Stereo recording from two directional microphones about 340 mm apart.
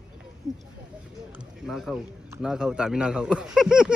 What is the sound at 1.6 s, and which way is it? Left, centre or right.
A man's voice, centre.